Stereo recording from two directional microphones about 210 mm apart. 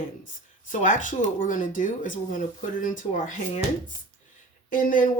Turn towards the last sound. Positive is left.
turn(degrees=40)  # may be behind; listen again after turning